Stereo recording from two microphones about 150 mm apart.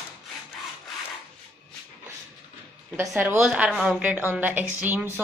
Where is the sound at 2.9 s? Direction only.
10° right (ahead or behind).